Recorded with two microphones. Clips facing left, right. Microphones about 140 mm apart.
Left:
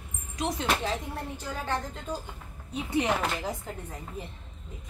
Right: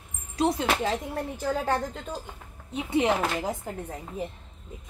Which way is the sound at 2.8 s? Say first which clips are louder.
Right 3 dB; 25° right (ahead or behind).